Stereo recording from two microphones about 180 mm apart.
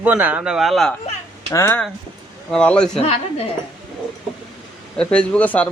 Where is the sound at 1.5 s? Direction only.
15° left (ahead or behind).